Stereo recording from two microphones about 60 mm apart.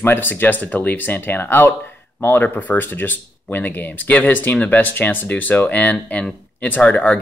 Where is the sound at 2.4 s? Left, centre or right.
Left.